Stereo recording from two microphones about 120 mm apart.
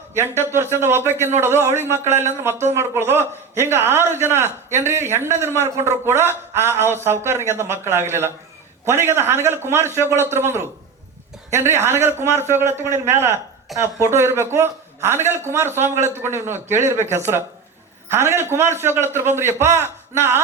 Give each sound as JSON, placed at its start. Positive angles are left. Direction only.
{"t": 0.1, "sound": "a man's voice", "side_deg": -20}